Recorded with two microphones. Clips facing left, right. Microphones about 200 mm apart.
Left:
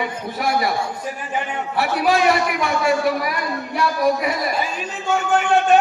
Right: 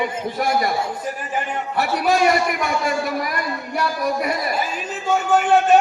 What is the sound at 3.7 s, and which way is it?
Speech, 45° right (ahead or behind).